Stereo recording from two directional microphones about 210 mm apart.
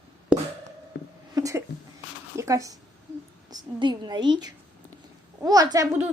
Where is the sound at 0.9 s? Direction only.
55° left (ahead or behind).